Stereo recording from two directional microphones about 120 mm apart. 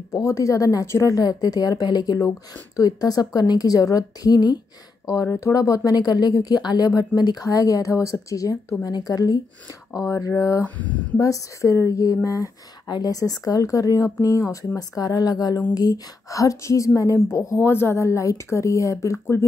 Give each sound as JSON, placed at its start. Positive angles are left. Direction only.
{"t": 0.1, "sound": "speech", "side_deg": 25}
{"t": 10.6, "sound": "speech", "side_deg": 15}
{"t": 11.1, "sound": "speech", "side_deg": 25}